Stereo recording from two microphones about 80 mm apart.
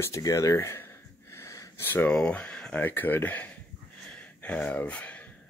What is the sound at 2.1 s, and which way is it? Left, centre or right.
Speech, centre.